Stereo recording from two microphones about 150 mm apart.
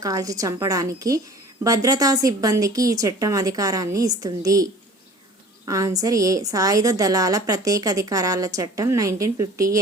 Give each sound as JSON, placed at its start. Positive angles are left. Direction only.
{"t": 0.0, "sound": "a woman's voice", "side_deg": -25}